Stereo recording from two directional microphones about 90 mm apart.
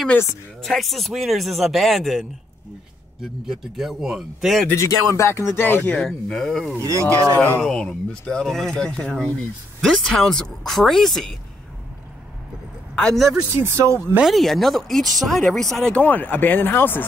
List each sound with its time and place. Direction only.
0.6 s speech: centre (ahead or behind)
4.7 s speech: 35° left (ahead or behind); by 6.0 s 20° left (ahead or behind)
6.0 s speech: 5° left (ahead or behind)
6.8 s speech: 35° right (ahead or behind)
7.3 s speech: 20° left (ahead or behind)
7.6 s speech: 10° left (ahead or behind)
12.9 s speech: 5° left (ahead or behind)
13.6 s speech: 30° right (ahead or behind)
14.2 s speech: centre (ahead or behind); by 17.0 s 25° left (ahead or behind)